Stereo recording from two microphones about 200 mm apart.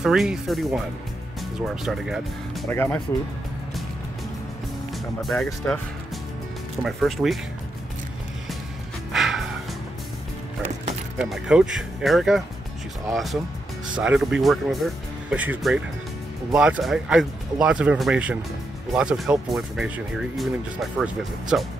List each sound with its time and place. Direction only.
0.0 s speech: centre (ahead or behind)
2.7 s speech: 10° left (ahead or behind)
5.2 s speech: centre (ahead or behind)
6.8 s speech: centre (ahead or behind)
9.1 s music: centre (ahead or behind)
11.1 s speech: centre (ahead or behind)